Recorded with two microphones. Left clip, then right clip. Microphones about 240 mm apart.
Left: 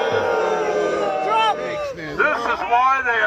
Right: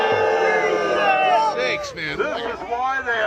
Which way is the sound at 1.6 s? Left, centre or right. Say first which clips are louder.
Right 2 dB; right.